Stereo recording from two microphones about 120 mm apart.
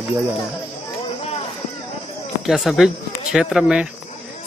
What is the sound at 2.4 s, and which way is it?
Speech, centre (ahead or behind).